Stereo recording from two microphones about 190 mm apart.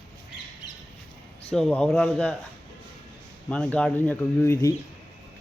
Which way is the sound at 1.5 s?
5° left (ahead or behind).